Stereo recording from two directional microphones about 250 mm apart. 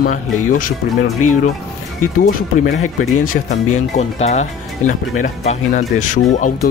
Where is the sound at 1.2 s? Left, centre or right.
Left.